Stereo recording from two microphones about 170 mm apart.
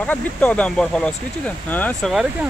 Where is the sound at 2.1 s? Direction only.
Centre (ahead or behind).